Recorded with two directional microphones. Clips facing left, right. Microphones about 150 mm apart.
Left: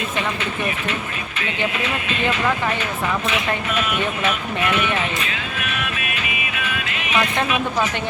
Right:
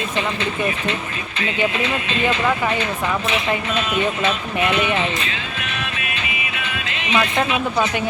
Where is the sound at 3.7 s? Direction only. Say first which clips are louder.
Right 2 dB; 30° right (ahead or behind).